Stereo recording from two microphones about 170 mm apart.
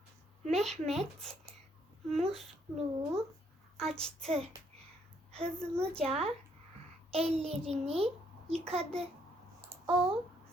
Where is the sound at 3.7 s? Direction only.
5° left (ahead or behind).